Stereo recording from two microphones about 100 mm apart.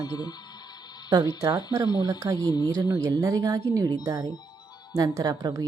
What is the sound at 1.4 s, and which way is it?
A woman's voice, 35° right (ahead or behind).